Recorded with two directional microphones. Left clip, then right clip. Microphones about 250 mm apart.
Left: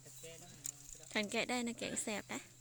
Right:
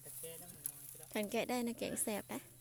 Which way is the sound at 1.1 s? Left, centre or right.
Centre.